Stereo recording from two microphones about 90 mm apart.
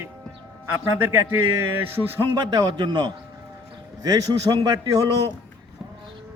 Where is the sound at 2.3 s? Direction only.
55° right (ahead or behind).